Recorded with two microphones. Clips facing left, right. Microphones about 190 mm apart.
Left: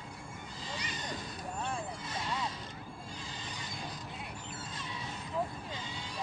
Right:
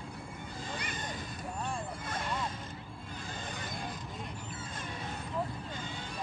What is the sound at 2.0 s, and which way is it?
Vehicle, 50° right (ahead or behind).